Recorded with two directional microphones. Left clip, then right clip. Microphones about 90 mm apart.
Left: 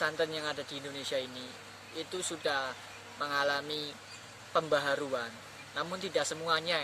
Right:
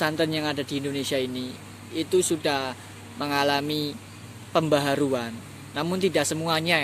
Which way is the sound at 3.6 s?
45° right (ahead or behind).